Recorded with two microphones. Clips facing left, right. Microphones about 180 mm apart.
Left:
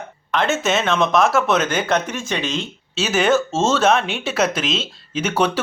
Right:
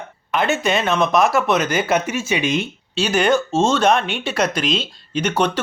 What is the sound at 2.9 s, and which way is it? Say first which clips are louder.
Speech: even; 5° left (ahead or behind).